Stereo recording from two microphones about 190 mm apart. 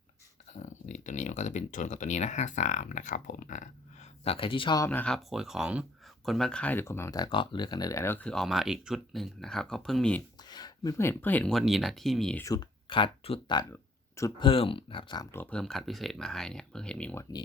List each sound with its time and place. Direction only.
0.5 s speech: 40° left (ahead or behind); by 4.9 s 25° left (ahead or behind)
4.9 s speech: 5° left (ahead or behind)
10.4 s speech: 20° left (ahead or behind); by 12.5 s 5° left (ahead or behind)
12.5 s speech: 25° left (ahead or behind); by 17.2 s 5° left (ahead or behind)